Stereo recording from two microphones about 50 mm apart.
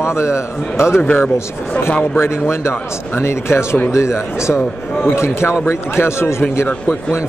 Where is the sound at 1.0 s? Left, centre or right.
Left.